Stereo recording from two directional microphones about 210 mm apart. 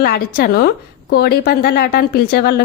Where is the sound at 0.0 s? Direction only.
45° left (ahead or behind).